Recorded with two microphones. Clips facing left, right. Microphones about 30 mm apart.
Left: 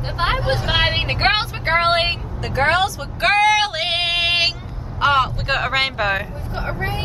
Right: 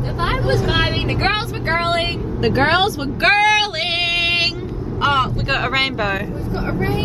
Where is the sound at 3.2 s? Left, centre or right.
Centre.